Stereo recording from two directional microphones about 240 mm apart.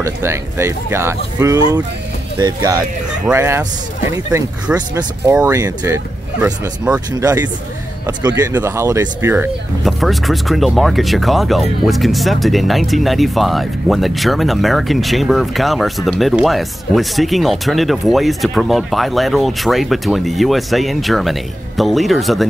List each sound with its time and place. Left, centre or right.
0.0 s speech: centre
9.8 s speech: centre